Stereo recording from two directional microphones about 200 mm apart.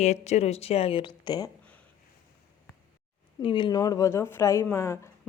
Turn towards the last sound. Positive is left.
turn(degrees=15)  # may be behind; listen again after turning